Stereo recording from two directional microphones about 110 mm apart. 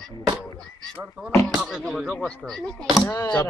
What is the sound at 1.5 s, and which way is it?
Speech, 5° right (ahead or behind).